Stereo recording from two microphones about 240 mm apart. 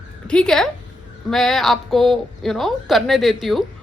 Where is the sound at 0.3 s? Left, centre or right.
Centre.